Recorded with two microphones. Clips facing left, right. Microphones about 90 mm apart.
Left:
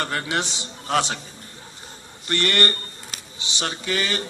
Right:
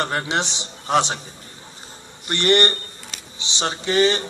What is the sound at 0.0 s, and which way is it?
Speech, 25° right (ahead or behind).